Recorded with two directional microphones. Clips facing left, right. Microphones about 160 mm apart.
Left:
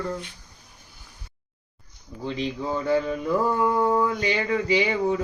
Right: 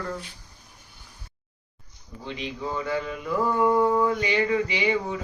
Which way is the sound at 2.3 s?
35° left (ahead or behind).